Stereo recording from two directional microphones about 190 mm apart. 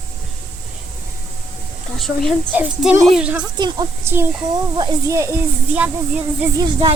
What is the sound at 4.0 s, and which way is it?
A child's voice, 10° right (ahead or behind).